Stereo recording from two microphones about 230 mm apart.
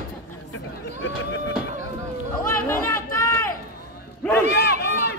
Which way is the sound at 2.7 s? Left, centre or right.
Centre.